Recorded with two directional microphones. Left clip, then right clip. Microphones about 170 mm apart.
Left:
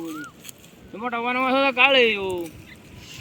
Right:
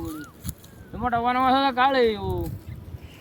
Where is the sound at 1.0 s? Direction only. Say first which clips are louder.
Right 2 dB; 15° right (ahead or behind).